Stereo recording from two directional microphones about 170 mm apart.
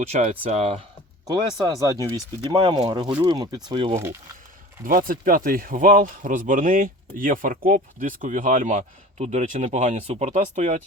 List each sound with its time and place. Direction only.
0.1 s speech: 40° right (ahead or behind)
1.3 s speech: 20° right (ahead or behind)
3.9 s speech: 15° right (ahead or behind)
4.9 s speech: 55° right (ahead or behind)